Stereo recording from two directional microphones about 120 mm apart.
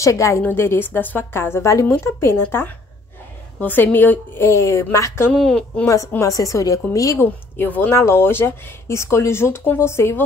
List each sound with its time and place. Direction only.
0.0 s a woman's voice: 25° left (ahead or behind)
5.3 s a woman's voice: 5° left (ahead or behind)
5.9 s a woman's voice: 25° left (ahead or behind)
7.5 s a woman's voice: 15° left (ahead or behind)